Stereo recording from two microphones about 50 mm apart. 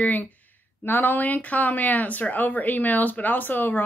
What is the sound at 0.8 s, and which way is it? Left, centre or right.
Speech, left.